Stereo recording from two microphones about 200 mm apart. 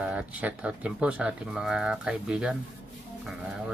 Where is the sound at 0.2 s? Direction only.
5° right (ahead or behind).